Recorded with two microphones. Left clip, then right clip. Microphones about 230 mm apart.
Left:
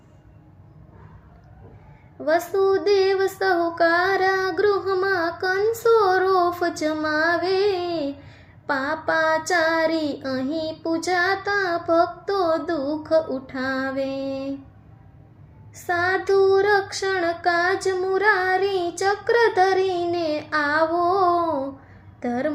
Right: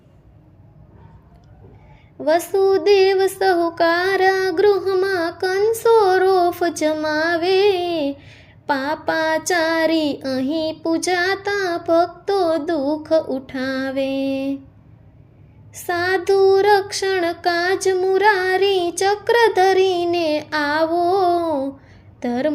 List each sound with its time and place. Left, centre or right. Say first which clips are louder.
2.2 s child singing: right 3 dB; right
15.7 s child singing: right 2 dB; right